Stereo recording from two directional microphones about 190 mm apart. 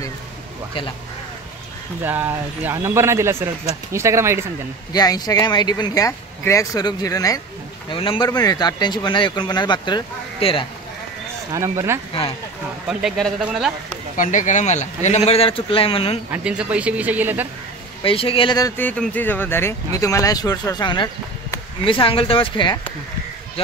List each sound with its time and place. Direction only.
2.0 s speech: 10° right (ahead or behind)
4.9 s speech: 20° left (ahead or behind)
11.5 s speech: 15° right (ahead or behind)
12.8 s a man's voice: 5° right (ahead or behind)
14.1 s speech: 40° left (ahead or behind)
16.3 s speech: 5° right (ahead or behind)
18.0 s speech: 30° left (ahead or behind)
18.8 s speech: 10° left (ahead or behind); by 22.8 s 25° left (ahead or behind)